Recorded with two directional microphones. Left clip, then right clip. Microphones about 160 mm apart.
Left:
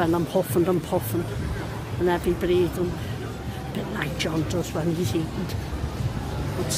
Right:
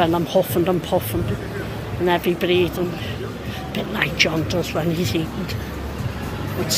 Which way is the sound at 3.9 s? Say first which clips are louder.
Right 9 dB; 25° left (ahead or behind).